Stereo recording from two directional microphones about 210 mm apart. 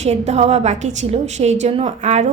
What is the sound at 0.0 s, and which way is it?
A woman's voice, 30° right (ahead or behind).